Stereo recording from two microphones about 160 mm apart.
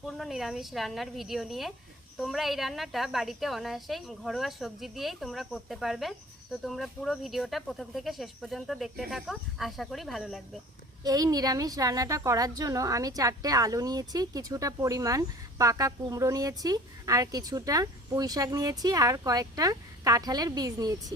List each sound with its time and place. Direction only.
0.0 s a woman's voice: centre (ahead or behind)
11.0 s a woman's voice: 25° right (ahead or behind)